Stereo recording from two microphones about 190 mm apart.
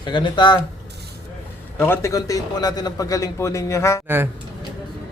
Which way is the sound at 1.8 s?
15° left (ahead or behind).